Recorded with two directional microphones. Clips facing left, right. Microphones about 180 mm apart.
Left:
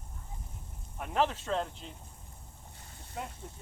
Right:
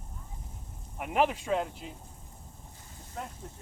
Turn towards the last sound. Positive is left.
turn(degrees=5)  # may be behind; listen again after turning